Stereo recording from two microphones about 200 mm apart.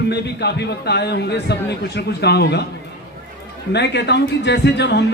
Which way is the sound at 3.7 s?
60° left (ahead or behind).